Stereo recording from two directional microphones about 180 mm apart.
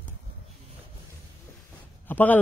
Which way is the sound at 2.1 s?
10° left (ahead or behind).